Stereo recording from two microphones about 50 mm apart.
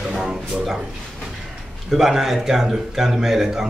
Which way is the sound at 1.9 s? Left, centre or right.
Centre.